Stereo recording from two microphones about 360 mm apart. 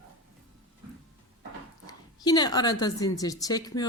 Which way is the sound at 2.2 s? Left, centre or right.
Centre.